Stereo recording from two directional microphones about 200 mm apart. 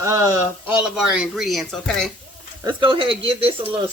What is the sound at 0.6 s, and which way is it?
Speech, 5° right (ahead or behind).